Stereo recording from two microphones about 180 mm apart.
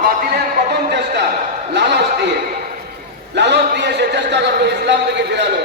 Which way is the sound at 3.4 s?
70° right (ahead or behind).